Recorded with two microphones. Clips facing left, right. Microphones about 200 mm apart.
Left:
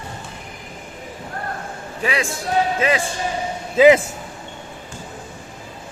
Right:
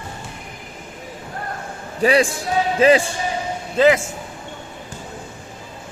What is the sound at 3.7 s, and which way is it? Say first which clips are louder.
Speech: left 3 dB; 15° left (ahead or behind).